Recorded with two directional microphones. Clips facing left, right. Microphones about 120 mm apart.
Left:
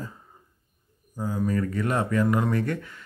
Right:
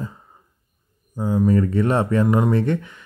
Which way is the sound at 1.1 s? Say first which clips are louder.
Right 8 dB; 25° right (ahead or behind).